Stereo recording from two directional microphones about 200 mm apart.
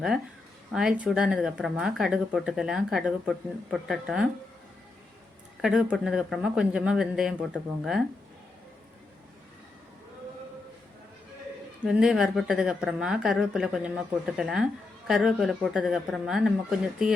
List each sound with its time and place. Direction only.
0.7 s speech: 5° right (ahead or behind)
5.6 s speech: 5° right (ahead or behind)
11.9 s speech: 5° right (ahead or behind)